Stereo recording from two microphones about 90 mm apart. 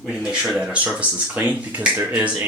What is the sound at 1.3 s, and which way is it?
Speech, 15° right (ahead or behind).